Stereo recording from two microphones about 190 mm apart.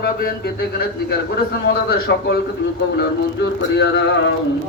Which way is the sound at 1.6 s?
55° left (ahead or behind).